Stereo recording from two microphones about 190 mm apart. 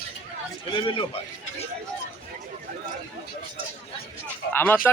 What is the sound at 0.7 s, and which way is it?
Speech, 25° left (ahead or behind).